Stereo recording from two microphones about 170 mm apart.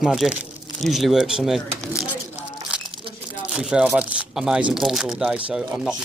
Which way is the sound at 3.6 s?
5° right (ahead or behind).